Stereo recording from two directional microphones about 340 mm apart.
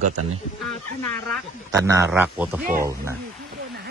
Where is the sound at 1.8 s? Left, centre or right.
Centre.